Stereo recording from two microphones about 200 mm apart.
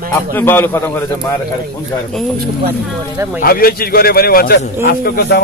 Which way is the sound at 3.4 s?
50° left (ahead or behind).